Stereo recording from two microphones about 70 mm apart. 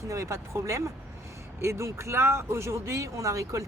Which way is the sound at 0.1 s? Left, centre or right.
Right.